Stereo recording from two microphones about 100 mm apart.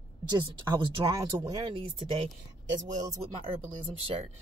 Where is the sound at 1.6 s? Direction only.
60° right (ahead or behind).